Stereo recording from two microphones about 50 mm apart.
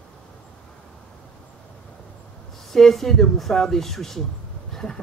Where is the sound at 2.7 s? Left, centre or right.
Centre.